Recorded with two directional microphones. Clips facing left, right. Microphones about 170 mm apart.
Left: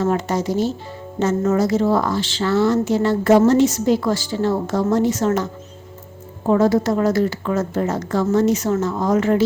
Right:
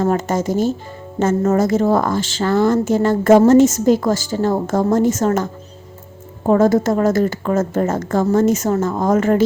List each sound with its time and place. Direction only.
0.0 s a woman's voice: 45° right (ahead or behind)
6.5 s a woman's voice: 50° right (ahead or behind)